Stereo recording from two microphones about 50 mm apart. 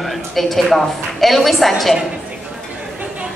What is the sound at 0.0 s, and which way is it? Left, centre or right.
A woman's voice, centre.